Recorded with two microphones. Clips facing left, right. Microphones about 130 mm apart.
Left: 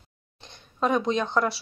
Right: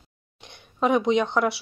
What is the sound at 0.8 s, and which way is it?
Speech, 15° right (ahead or behind).